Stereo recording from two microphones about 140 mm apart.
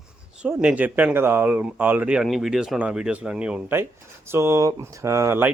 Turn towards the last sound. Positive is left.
turn(degrees=-15)  # may be behind; listen again after turning